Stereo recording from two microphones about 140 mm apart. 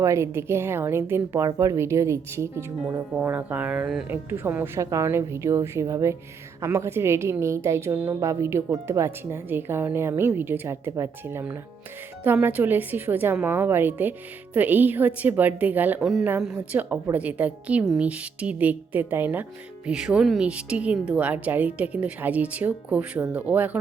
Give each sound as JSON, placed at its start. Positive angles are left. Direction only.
{"t": 0.0, "sound": "a woman's voice", "side_deg": -20}